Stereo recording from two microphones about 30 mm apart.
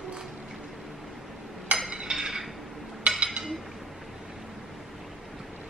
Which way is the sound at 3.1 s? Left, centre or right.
Right.